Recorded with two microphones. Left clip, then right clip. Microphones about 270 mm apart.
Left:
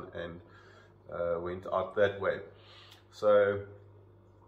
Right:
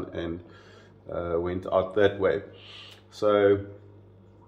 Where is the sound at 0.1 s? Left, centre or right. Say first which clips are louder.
Right 7 dB; right.